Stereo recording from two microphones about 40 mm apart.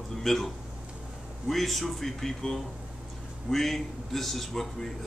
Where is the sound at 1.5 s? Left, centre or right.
Centre.